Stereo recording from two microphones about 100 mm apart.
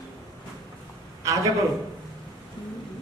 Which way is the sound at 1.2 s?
35° right (ahead or behind).